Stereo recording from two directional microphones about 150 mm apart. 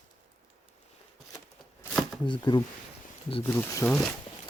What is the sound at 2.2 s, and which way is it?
Speech, 30° left (ahead or behind).